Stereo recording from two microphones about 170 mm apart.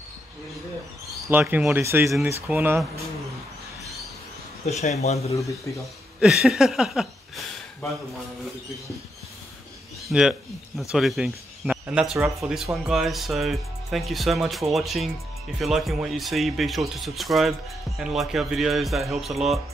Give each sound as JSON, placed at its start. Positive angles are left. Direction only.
{"t": 1.3, "sound": "speech", "side_deg": -5}
{"t": 4.6, "sound": "speech", "side_deg": 40}
{"t": 6.1, "sound": "speech", "side_deg": 0}
{"t": 10.0, "sound": "speech", "side_deg": -5}